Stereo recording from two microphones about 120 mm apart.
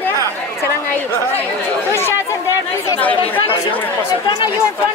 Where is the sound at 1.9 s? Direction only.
20° left (ahead or behind).